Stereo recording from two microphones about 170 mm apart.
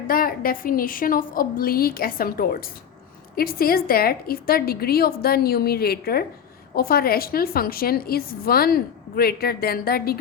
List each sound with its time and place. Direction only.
0.1 s a woman's voice: 60° left (ahead or behind)